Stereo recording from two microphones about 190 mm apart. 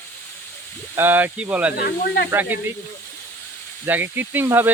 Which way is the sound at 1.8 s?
60° left (ahead or behind).